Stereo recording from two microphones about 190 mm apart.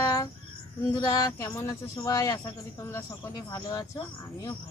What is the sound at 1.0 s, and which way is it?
Speech, 20° left (ahead or behind).